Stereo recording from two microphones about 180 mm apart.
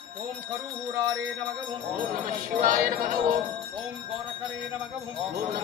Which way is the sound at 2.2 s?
50° right (ahead or behind).